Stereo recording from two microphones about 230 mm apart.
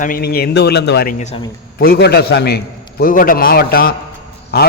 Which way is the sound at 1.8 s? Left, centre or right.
Left.